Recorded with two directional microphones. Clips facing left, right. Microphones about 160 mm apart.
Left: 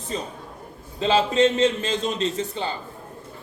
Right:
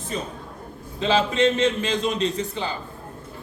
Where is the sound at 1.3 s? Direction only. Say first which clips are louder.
Left 1 dB; 40° left (ahead or behind).